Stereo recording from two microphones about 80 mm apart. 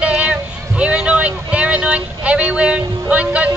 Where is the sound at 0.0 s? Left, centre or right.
Centre.